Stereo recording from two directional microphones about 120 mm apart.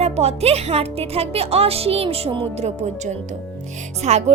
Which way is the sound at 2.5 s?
65° right (ahead or behind).